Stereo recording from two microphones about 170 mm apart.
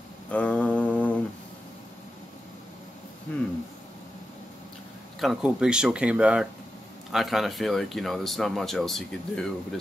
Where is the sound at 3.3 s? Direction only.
10° left (ahead or behind).